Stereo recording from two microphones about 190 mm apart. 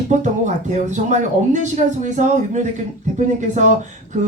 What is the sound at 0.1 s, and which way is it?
Speech, 40° right (ahead or behind).